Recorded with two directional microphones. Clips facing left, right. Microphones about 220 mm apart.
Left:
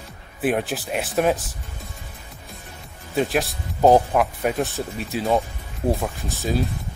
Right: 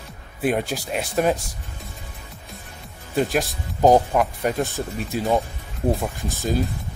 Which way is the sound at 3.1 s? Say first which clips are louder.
Even; centre (ahead or behind).